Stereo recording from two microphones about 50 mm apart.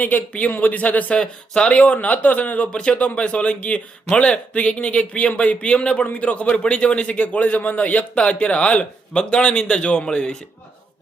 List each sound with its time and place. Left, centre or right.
0.0 s speech: left
1.2 s a man's voice: centre